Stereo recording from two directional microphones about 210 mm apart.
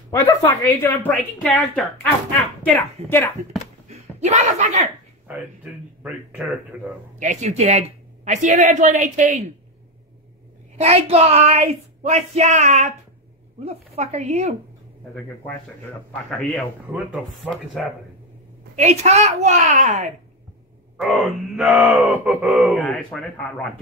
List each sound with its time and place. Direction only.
0.4 s a woman's voice: 10° left (ahead or behind)
4.2 s speech: 35° right (ahead or behind)
6.0 s speech: 5° right (ahead or behind)
7.2 s speech: 35° right (ahead or behind)
10.8 s speech: 30° right (ahead or behind)
16.3 s speech: centre (ahead or behind)
18.8 s speech: 30° right (ahead or behind)
21.0 s speech: centre (ahead or behind)